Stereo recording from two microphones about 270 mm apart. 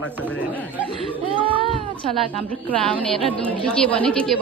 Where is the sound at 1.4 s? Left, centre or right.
Centre.